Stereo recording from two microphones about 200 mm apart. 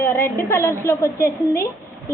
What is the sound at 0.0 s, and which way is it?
A woman's voice, 10° left (ahead or behind).